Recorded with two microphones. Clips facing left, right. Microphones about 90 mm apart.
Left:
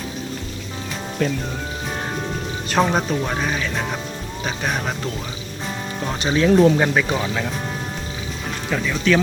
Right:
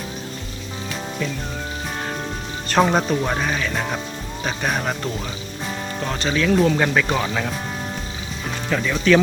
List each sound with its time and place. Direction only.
1.2 s speech: 50° left (ahead or behind)
2.6 s speech: centre (ahead or behind)
6.0 s speech: 10° left (ahead or behind)
6.3 s speech: 25° left (ahead or behind)
6.7 s speech: 10° left (ahead or behind)
8.7 s speech: centre (ahead or behind)